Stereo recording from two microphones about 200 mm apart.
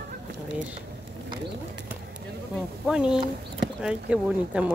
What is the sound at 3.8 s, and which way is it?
Speech, 5° right (ahead or behind).